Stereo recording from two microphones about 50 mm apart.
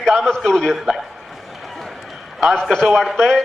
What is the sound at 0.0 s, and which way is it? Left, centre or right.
Speech, centre.